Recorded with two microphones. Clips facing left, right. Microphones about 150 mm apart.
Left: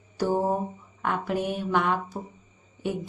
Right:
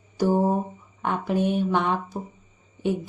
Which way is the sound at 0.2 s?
15° right (ahead or behind).